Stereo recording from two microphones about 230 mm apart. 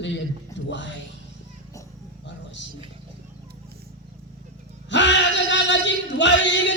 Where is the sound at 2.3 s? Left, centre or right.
Left.